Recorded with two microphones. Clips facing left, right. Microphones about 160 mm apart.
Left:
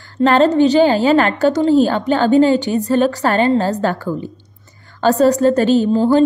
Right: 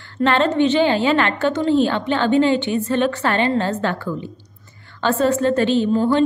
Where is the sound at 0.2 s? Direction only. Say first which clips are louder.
Left 5 dB; 40° left (ahead or behind).